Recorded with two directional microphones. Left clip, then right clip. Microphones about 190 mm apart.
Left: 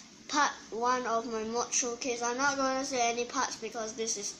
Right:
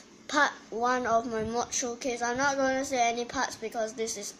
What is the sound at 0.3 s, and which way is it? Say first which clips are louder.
A child's voice: right 3 dB; 50° right (ahead or behind).